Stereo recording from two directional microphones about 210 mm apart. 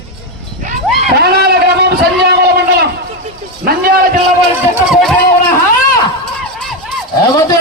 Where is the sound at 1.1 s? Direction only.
50° right (ahead or behind).